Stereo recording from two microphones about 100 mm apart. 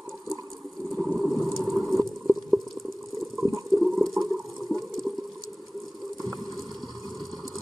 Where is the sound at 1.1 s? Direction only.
Centre (ahead or behind).